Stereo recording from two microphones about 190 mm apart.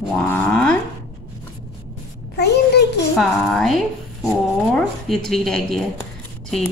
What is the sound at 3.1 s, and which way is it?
A woman's voice, centre (ahead or behind).